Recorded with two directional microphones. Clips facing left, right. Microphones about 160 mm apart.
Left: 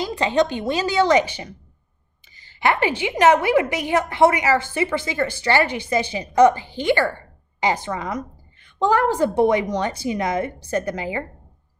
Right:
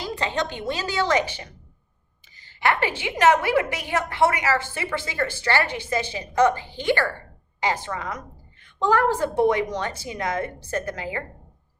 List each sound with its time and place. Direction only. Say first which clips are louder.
0.0 s a woman's voice: left 7 dB; 15° left (ahead or behind)